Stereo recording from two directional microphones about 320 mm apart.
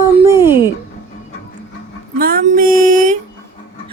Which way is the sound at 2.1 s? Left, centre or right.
Right.